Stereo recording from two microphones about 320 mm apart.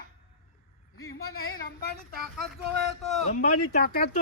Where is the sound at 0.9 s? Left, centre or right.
Left.